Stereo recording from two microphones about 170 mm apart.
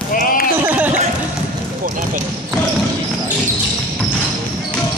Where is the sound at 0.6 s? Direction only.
10° right (ahead or behind).